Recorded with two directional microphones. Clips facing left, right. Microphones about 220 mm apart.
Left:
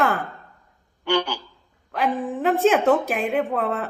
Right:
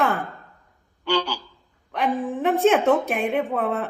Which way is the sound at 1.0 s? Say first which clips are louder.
Left 1 dB; 55° left (ahead or behind).